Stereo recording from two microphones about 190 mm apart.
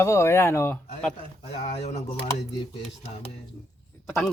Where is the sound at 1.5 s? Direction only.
35° left (ahead or behind).